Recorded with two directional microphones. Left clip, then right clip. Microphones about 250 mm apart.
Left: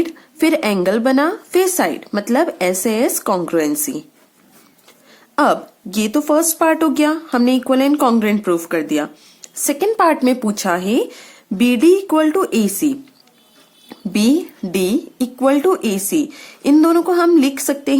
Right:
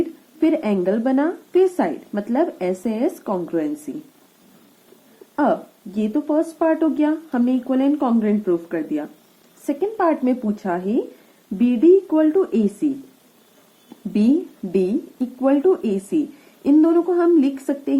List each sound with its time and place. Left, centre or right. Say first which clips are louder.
0.3 s speech: left 4 dB; left
5.4 s speech: left 5 dB; left
14.1 s speech: left 3 dB; left